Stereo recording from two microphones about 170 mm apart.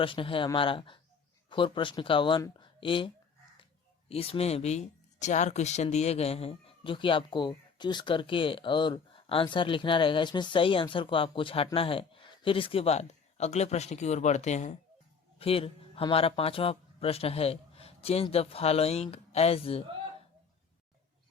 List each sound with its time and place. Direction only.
0.0 s speech: 30° left (ahead or behind)
4.1 s a man's voice: 35° left (ahead or behind)